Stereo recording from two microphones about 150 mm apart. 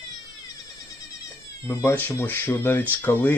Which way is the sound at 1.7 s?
15° left (ahead or behind).